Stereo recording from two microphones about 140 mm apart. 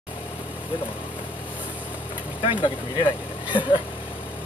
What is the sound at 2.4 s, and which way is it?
Speech, 35° left (ahead or behind).